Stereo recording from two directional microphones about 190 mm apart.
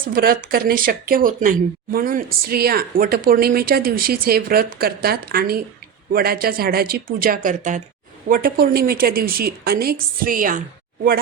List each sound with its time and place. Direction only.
0.0 s speech: 50° right (ahead or behind)